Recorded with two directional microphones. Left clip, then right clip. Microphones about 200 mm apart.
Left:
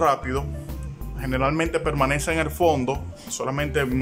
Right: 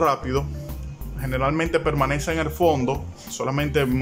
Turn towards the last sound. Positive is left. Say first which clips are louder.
# right 2 dB
turn(degrees=0)  # may be behind; listen again after turning